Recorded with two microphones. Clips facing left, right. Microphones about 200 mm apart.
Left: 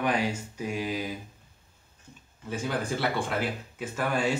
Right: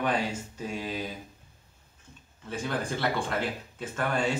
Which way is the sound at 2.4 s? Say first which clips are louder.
Left 1 dB; 10° left (ahead or behind).